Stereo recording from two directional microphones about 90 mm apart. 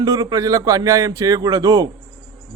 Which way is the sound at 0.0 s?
45° right (ahead or behind).